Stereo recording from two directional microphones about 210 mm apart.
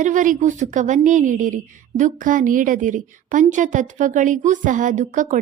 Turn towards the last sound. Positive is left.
turn(degrees=-35)  # may be behind; listen again after turning